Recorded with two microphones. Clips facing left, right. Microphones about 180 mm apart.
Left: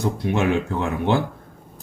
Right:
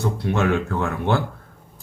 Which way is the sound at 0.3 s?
15° left (ahead or behind).